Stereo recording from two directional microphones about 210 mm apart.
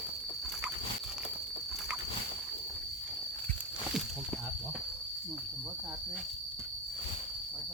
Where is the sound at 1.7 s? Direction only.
Centre (ahead or behind).